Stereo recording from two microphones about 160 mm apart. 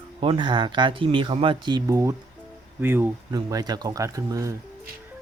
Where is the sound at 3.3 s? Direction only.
25° right (ahead or behind).